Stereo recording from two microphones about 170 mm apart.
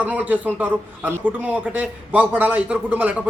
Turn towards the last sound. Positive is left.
turn(degrees=-10)  # may be behind; listen again after turning